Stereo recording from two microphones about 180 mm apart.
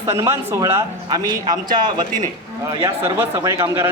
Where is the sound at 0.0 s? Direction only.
15° right (ahead or behind).